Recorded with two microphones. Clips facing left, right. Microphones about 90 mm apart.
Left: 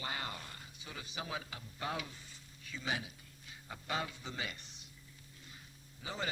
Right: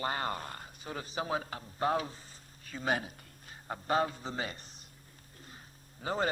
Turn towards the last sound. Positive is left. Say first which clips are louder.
# right 9 dB
turn(degrees=-45)  # may be behind; listen again after turning